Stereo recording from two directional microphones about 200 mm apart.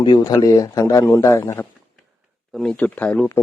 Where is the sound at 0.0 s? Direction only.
20° left (ahead or behind).